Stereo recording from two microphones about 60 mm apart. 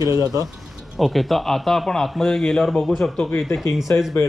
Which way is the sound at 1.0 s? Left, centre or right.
Centre.